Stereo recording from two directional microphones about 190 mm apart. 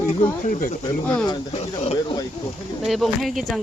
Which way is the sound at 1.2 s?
25° left (ahead or behind).